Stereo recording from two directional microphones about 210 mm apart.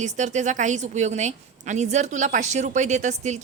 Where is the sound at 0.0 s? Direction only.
35° right (ahead or behind).